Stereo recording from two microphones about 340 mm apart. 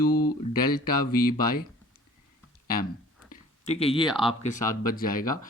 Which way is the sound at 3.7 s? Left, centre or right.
Centre.